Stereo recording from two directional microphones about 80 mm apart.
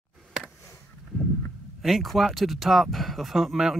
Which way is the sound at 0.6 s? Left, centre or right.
Left.